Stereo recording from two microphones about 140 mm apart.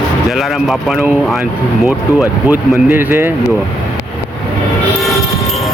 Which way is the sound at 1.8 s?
10° right (ahead or behind).